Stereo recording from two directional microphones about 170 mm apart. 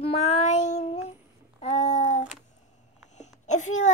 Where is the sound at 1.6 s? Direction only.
45° left (ahead or behind).